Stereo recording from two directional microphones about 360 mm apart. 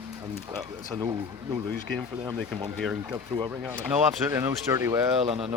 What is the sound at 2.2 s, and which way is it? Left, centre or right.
Speech, centre.